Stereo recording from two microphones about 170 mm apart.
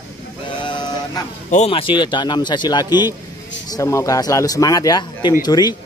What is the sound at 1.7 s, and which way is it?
Speech, 30° left (ahead or behind).